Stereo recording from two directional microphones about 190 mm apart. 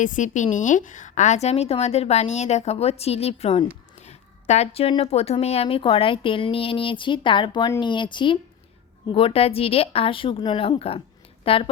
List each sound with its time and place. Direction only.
0.0 s a woman's voice: 40° left (ahead or behind)